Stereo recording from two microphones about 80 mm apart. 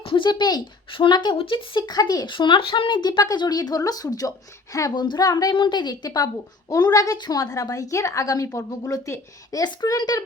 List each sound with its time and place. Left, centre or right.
0.1 s speech: left
2.0 s speech: left
2.2 s a woman's voice: left
4.9 s a woman's voice: left
5.5 s speech: left